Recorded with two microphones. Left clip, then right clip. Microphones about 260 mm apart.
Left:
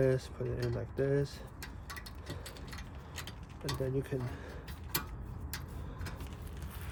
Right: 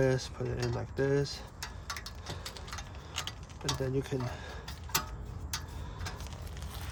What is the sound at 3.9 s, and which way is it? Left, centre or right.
Speech, right.